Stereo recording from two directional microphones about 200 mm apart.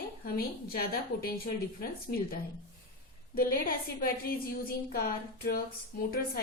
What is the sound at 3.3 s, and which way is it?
A woman's voice, 45° left (ahead or behind).